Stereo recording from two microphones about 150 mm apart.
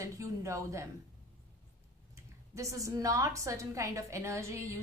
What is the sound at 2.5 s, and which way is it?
A woman's voice, 20° right (ahead or behind).